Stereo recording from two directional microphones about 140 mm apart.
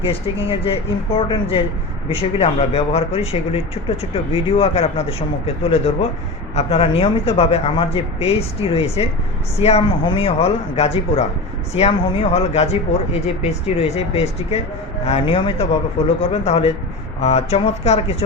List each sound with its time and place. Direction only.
0.0 s speech: 40° left (ahead or behind)